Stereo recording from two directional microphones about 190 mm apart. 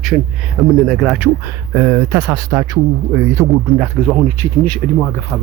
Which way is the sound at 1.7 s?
15° right (ahead or behind).